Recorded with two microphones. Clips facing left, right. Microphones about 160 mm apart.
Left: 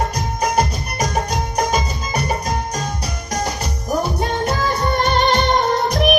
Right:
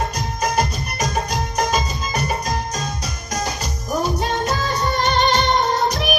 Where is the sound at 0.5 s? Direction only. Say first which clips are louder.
Left 2 dB; 30° left (ahead or behind).